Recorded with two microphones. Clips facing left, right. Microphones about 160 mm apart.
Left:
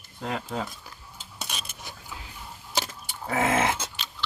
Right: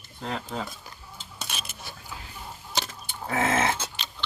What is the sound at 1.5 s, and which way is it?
Cutlery, 15° left (ahead or behind).